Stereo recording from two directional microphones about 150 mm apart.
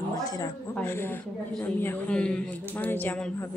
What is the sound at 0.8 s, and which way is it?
A man's voice, 15° left (ahead or behind).